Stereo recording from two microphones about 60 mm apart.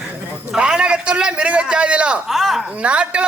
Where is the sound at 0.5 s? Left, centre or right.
Centre.